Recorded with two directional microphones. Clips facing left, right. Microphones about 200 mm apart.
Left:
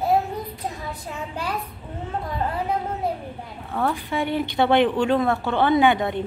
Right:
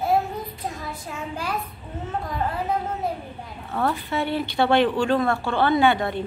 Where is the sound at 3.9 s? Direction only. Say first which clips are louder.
Left 1 dB; 15° left (ahead or behind).